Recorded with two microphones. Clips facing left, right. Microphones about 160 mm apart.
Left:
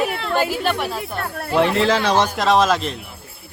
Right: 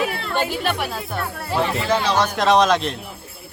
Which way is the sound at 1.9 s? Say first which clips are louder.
Left 2 dB; 80° left.